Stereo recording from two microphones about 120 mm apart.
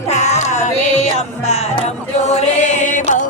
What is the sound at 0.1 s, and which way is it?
Music, 75° left (ahead or behind).